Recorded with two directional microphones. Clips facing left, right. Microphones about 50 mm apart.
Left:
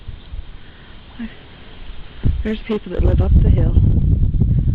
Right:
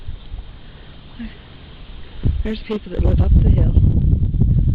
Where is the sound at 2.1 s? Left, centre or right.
Left.